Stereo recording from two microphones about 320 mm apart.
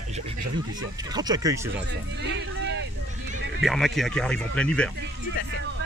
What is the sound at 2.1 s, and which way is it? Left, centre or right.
Speech, right.